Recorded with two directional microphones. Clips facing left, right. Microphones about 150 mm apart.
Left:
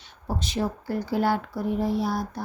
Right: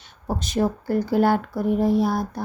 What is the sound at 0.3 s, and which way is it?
Speech, 45° right (ahead or behind).